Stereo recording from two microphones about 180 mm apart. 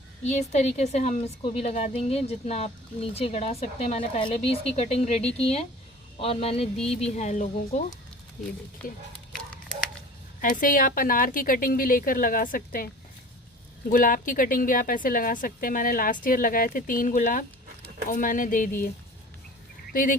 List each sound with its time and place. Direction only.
0.3 s a woman's voice: 40° left (ahead or behind)
8.8 s speech: 5° left (ahead or behind)
10.4 s a woman's voice: 50° left (ahead or behind)
19.9 s speech: 50° left (ahead or behind)